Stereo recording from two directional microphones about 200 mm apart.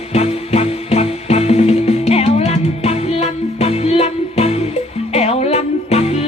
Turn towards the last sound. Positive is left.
turn(degrees=30)  # may be behind; listen again after turning